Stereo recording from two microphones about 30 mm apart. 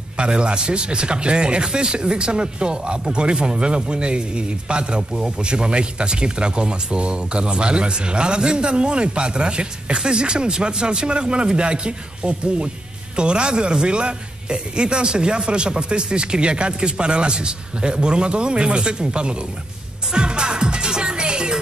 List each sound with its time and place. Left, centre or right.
0.2 s speech: right
20.1 s music: right